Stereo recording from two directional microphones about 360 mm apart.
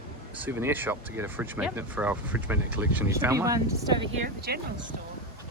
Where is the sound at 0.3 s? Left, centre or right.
Centre.